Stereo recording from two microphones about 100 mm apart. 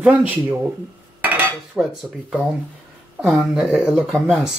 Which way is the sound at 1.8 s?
15° right (ahead or behind).